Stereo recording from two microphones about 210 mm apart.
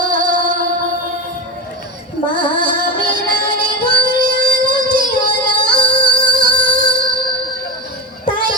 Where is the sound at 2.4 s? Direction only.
40° right (ahead or behind).